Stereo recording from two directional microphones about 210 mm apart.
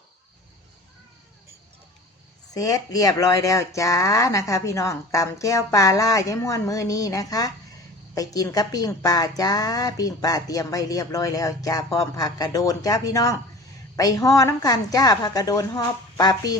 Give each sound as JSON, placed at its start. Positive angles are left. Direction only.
{"t": 2.5, "sound": "a woman's voice", "side_deg": 15}